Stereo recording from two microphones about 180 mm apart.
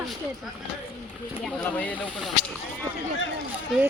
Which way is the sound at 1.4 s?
5° left (ahead or behind).